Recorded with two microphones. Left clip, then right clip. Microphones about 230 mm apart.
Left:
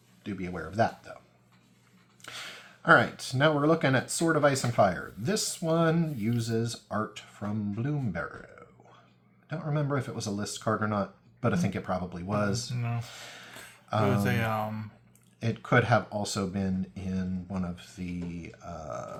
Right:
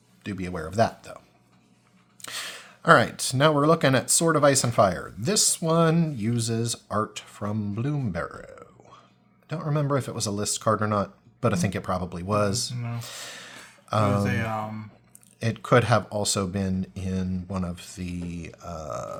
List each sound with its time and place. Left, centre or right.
0.2 s speech: right
2.2 s speech: right
12.7 s speech: left
13.0 s speech: right
14.3 s speech: centre
15.4 s speech: right